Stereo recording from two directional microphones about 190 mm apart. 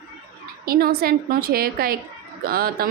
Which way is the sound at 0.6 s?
50° right (ahead or behind).